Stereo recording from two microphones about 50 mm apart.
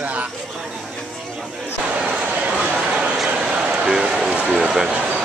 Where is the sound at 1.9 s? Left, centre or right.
Right.